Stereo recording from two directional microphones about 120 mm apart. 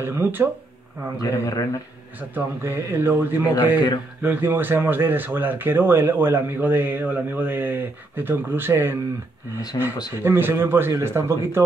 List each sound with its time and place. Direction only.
0.0 s a man's voice: 20° right (ahead or behind)
1.1 s a man's voice: 30° left (ahead or behind)
2.3 s a man's voice: 20° right (ahead or behind)
9.7 s speech: 35° left (ahead or behind)
10.2 s a man's voice: 20° right (ahead or behind)